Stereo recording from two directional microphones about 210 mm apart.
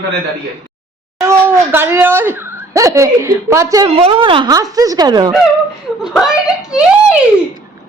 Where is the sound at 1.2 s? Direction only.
10° right (ahead or behind).